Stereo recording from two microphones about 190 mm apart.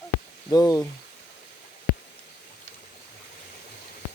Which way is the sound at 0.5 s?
20° left (ahead or behind).